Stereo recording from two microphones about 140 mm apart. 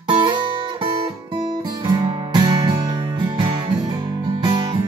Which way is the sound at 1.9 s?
30° right (ahead or behind).